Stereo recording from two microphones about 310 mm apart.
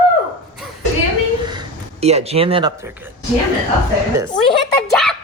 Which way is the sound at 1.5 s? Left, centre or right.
Centre.